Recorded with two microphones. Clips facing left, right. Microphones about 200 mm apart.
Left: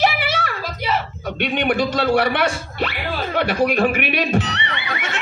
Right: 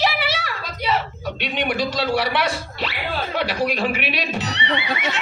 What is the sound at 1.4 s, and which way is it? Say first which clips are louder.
A man's voice: left 4 dB; 55° left (ahead or behind).